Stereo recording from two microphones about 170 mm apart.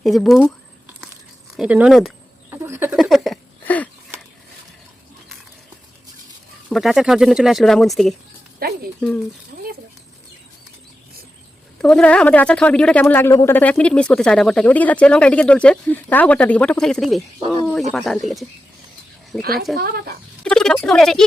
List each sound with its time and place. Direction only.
0.0 s speech: centre (ahead or behind)
1.5 s speech: 5° right (ahead or behind)
2.5 s bird: 15° right (ahead or behind)
2.9 s speech: centre (ahead or behind)
3.6 s wheeze: 10° left (ahead or behind)
6.7 s speech: centre (ahead or behind)
8.5 s speech: 65° right (ahead or behind)
9.0 s speech: 10° left (ahead or behind)
11.8 s speech: 5° left (ahead or behind)
19.4 s speech: 65° right (ahead or behind)
20.4 s speech: 5° left (ahead or behind)